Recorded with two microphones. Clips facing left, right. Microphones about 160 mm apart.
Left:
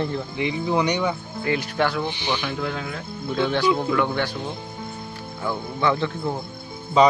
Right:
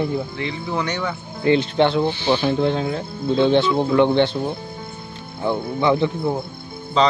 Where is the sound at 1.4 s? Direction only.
25° right (ahead or behind).